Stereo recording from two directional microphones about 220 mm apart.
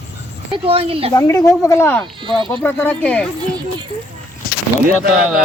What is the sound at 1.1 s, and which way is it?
Speech, 15° left (ahead or behind).